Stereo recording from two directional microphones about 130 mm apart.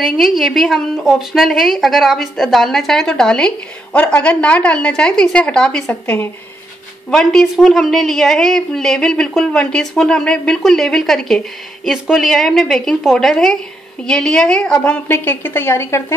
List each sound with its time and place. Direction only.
0.2 s a woman's voice: centre (ahead or behind)
15.0 s a woman's voice: 15° left (ahead or behind)